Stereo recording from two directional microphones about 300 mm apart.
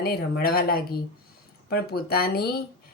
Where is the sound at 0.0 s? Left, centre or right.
Left.